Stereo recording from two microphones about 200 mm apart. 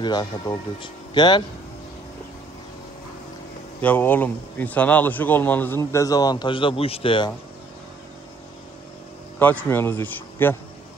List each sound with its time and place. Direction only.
0.0 s speech: 20° left (ahead or behind)
3.8 s speech: 10° left (ahead or behind); by 7.3 s 25° left (ahead or behind)
9.4 s speech: 10° left (ahead or behind)